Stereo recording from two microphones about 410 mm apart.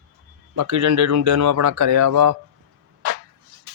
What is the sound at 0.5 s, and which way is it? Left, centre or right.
Speech, right.